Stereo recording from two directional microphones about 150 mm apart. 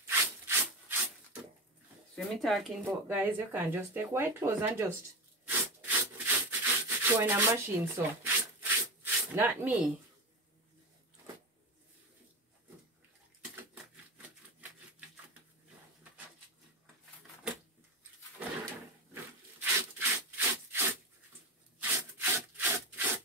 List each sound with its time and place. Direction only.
0.2 s wood: 15° right (ahead or behind)
2.1 s speech: centre (ahead or behind)
2.8 s speech: 10° right (ahead or behind)
5.5 s wood: 15° right (ahead or behind)
14.1 s typewriter: 10° right (ahead or behind)
19.6 s wood: 15° right (ahead or behind)
21.7 s sawing: 10° right (ahead or behind)